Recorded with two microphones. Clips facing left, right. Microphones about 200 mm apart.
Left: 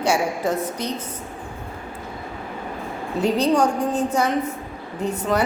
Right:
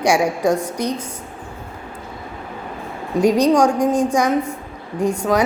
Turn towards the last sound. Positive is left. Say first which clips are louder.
# right 4 dB
turn(degrees=-10)  # may be behind; listen again after turning